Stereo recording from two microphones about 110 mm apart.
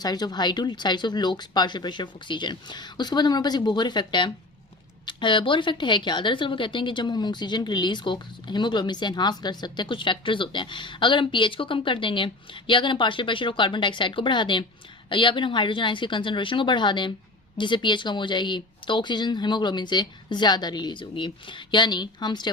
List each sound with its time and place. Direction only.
0.0 s a woman's voice: 35° left (ahead or behind)